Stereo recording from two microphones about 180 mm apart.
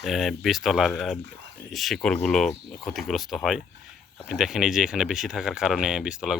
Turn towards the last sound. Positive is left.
turn(degrees=-5)  # may be behind; listen again after turning